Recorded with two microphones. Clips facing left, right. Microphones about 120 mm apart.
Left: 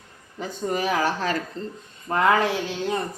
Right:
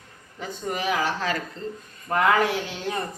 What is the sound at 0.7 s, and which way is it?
Speech, 40° left (ahead or behind).